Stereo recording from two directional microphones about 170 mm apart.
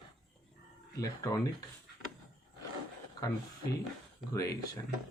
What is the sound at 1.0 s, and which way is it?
Speech, 20° left (ahead or behind).